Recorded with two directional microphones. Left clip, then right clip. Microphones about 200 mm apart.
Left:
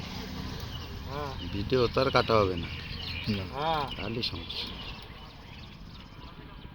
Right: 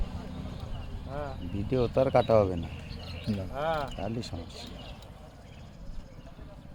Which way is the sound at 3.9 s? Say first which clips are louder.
Even; 45° right (ahead or behind).